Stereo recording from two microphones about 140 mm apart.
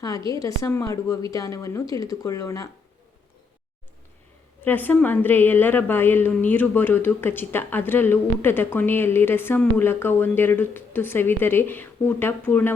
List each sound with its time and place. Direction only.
0.3 s speech: 25° left (ahead or behind)
4.6 s a woman's voice: 15° left (ahead or behind)